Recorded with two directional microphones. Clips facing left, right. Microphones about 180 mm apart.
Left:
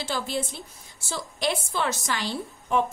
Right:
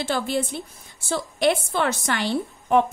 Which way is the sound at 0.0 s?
60° right (ahead or behind).